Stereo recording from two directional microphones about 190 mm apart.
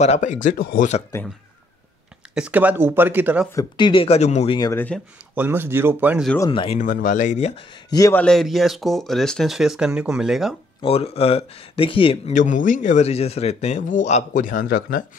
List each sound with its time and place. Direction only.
0.0 s speech: 40° left (ahead or behind)
2.3 s speech: 5° right (ahead or behind)
3.5 s speech: 25° left (ahead or behind)
4.6 s speech: 20° left (ahead or behind)
5.3 s speech: 10° right (ahead or behind)
6.5 s speech: 25° left (ahead or behind)
6.8 s speech: 45° left (ahead or behind); by 8.2 s 20° left (ahead or behind)
8.2 s speech: centre (ahead or behind)
10.8 s speech: 30° left (ahead or behind); by 15.0 s 50° left (ahead or behind)